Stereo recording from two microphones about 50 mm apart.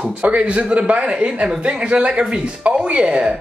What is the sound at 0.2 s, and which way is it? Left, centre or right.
Speech, right.